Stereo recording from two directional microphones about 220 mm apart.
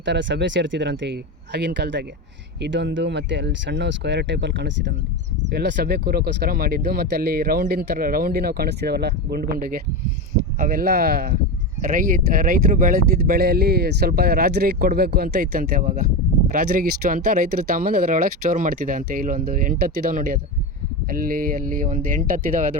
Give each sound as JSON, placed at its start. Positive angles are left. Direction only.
{"t": 0.0, "sound": "speech", "side_deg": -55}